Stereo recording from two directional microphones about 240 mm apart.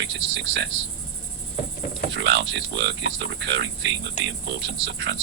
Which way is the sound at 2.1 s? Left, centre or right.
Right.